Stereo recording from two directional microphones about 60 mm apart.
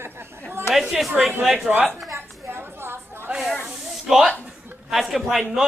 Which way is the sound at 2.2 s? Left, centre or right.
Right.